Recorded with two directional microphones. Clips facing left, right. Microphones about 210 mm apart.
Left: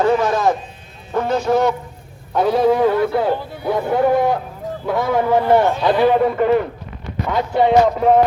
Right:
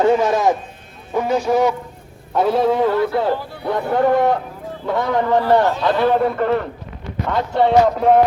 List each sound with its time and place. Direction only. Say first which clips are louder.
0.0 s speech: right 1 dB; 20° right (ahead or behind)
2.3 s music: left 1 dB; centre (ahead or behind)
3.6 s speech: left 2 dB; 5° left (ahead or behind)
3.9 s music: right 1 dB; 5° left (ahead or behind)
5.4 s a man's voice: left 1 dB; 15° left (ahead or behind)
7.3 s music: left 1 dB; 5° left (ahead or behind)